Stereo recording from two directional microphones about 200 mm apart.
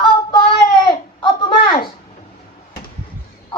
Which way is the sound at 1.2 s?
25° left (ahead or behind).